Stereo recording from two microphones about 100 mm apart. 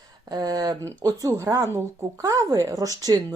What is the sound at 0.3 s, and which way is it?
Speech, 40° right (ahead or behind).